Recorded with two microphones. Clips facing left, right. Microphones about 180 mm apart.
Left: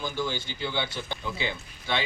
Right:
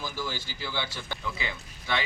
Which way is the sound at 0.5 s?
25° left (ahead or behind).